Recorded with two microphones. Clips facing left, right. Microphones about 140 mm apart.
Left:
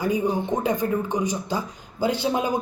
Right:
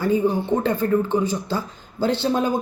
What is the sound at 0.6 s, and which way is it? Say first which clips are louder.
Speech: right 3 dB; 15° left (ahead or behind).